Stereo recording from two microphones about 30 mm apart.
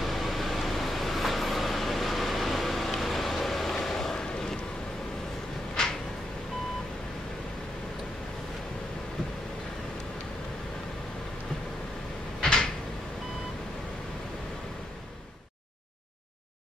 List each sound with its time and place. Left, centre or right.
0.0 s vehicle: centre
5.8 s a sound: left
12.4 s cupboard open or close: left